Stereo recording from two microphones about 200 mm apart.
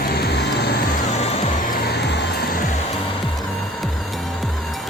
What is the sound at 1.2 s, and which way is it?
Music, 35° left (ahead or behind).